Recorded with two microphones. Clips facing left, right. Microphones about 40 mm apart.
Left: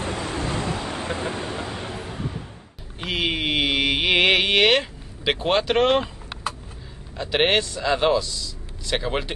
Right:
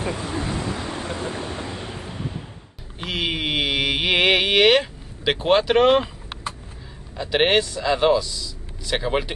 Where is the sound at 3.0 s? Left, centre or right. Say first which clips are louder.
Left 1 dB; centre.